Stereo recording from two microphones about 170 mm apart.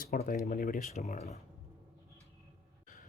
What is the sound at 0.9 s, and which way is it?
Speech, 45° left (ahead or behind).